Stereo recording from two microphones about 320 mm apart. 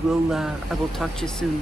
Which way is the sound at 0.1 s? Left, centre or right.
Centre.